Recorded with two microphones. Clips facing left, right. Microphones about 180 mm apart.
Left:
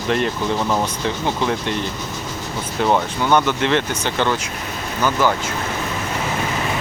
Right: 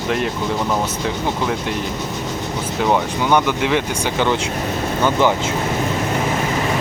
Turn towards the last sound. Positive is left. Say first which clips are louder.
# right 2 dB
turn(degrees=-20)  # may be behind; listen again after turning